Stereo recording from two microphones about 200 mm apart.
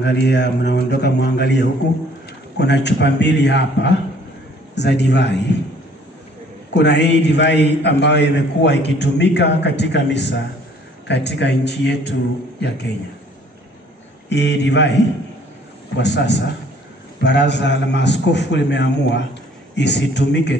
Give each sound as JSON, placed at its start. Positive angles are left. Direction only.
{"t": 0.0, "sound": "a man's voice", "side_deg": 60}
{"t": 6.7, "sound": "a man's voice", "side_deg": 60}
{"t": 14.3, "sound": "a man's voice", "side_deg": 60}
{"t": 16.0, "sound": "a man's voice", "side_deg": 60}